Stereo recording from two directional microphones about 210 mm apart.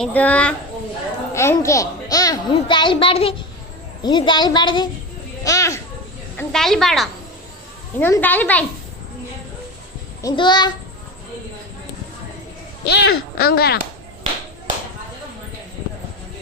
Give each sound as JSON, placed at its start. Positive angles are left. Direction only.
{"t": 0.0, "sound": "a child's voice", "side_deg": 5}
{"t": 5.4, "sound": "children playing", "side_deg": 15}
{"t": 6.3, "sound": "speech", "side_deg": 0}
{"t": 10.2, "sound": "a child's voice", "side_deg": 20}
{"t": 12.8, "sound": "speech", "side_deg": 50}